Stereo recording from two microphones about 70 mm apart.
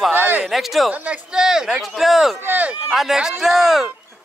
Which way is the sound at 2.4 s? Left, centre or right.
Right.